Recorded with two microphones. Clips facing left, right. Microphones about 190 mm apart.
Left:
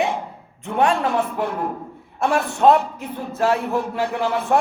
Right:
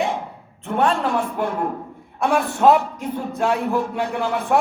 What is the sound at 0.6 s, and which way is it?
Speech, 60° right (ahead or behind).